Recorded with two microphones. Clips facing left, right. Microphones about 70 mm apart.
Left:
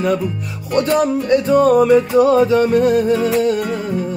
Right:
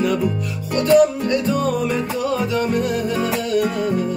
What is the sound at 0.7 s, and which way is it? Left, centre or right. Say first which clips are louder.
Music: right 1 dB; left.